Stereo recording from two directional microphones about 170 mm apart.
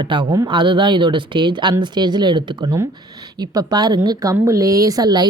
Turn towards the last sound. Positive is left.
turn(degrees=-25)  # may be behind; listen again after turning